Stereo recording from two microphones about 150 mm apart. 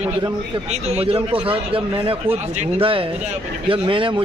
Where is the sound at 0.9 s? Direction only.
40° right (ahead or behind).